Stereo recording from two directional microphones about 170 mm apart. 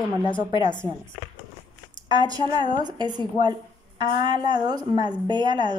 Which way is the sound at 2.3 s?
25° right (ahead or behind).